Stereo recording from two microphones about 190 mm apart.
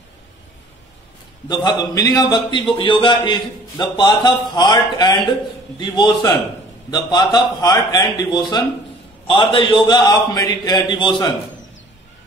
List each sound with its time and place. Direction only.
1.5 s a man's voice: 20° left (ahead or behind)